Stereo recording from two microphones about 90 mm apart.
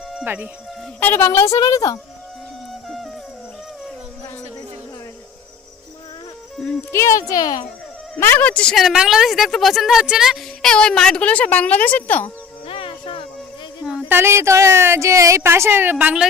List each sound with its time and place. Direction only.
0.9 s speech: 20° left (ahead or behind)
1.5 s speech: 45° left (ahead or behind)
6.6 s music: 5° left (ahead or behind)
6.9 s speech: 35° left (ahead or behind)
8.2 s speech: 20° left (ahead or behind)
8.7 s a woman's voice: 5° right (ahead or behind)
10.6 s speech: 10° left (ahead or behind)
12.6 s music: 90° left
14.1 s speech: 25° right (ahead or behind)